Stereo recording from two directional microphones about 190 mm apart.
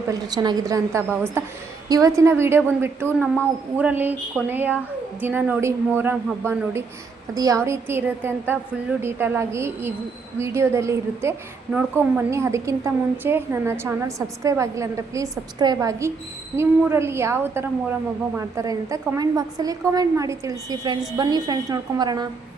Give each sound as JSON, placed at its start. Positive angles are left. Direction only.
{"t": 0.1, "sound": "a woman's voice", "side_deg": -20}
{"t": 3.1, "sound": "speech", "side_deg": 5}
{"t": 3.8, "sound": "a woman's voice", "side_deg": -10}